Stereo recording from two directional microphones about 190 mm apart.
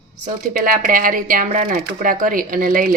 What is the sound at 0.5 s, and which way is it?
Speech, 45° right (ahead or behind).